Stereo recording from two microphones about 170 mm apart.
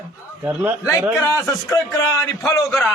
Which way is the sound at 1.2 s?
15° left (ahead or behind).